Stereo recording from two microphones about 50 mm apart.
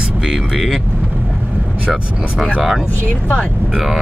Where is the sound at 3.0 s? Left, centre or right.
Left.